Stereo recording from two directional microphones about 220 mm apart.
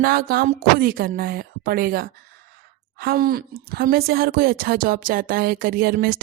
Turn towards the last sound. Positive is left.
turn(degrees=-40)  # may be behind; listen again after turning